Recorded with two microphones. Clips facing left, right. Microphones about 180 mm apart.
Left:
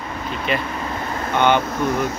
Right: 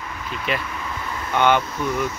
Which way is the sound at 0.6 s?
40° left (ahead or behind).